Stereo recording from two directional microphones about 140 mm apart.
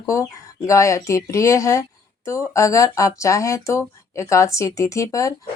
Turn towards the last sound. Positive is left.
turn(degrees=25)  # may be behind; listen again after turning